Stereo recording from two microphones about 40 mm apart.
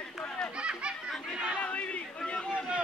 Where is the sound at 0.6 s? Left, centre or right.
Right.